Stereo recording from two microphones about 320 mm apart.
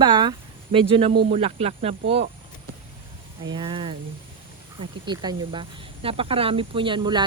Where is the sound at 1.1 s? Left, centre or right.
Right.